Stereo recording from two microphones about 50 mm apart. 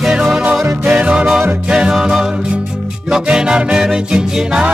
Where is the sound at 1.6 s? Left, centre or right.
Centre.